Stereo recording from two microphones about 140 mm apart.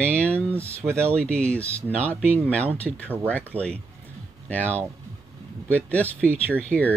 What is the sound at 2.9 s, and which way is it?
Speech, centre (ahead or behind).